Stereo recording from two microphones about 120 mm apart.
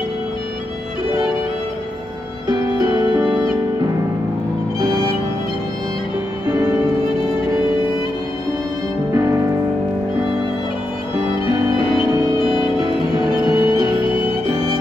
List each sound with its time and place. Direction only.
4.7 s music: 35° right (ahead or behind)
11.4 s music: 50° left (ahead or behind)
13.2 s music: 35° right (ahead or behind)